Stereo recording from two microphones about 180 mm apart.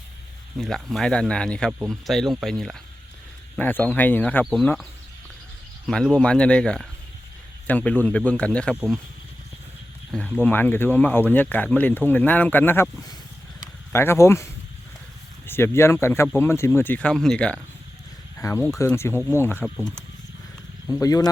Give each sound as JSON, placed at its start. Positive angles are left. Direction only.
{"t": 0.6, "sound": "speech", "side_deg": 0}
{"t": 8.7, "sound": "speech", "side_deg": -5}
{"t": 10.1, "sound": "speech", "side_deg": 5}
{"t": 13.6, "sound": "a sound", "side_deg": 15}
{"t": 15.4, "sound": "speech", "side_deg": 15}
{"t": 19.6, "sound": "speech", "side_deg": 0}
{"t": 20.8, "sound": "speech", "side_deg": 15}